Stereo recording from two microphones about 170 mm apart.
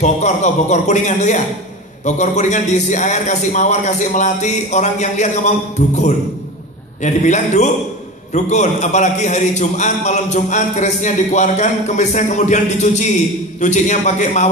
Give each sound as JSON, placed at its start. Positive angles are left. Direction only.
{"t": 0.0, "sound": "a man's voice", "side_deg": 45}